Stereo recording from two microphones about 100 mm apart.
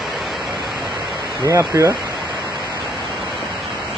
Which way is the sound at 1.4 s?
30° right (ahead or behind).